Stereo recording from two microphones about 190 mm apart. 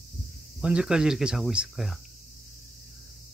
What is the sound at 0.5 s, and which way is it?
Speech, 5° right (ahead or behind).